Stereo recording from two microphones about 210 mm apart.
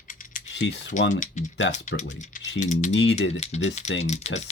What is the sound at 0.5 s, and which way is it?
Speech, 55° left (ahead or behind).